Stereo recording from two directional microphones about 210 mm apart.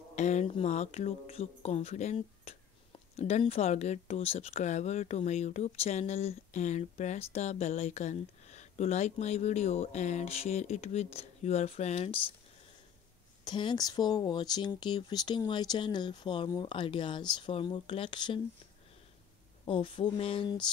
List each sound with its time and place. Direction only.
0.1 s speech: 35° left (ahead or behind)
13.4 s speech: 20° left (ahead or behind)
19.6 s speech: 25° left (ahead or behind)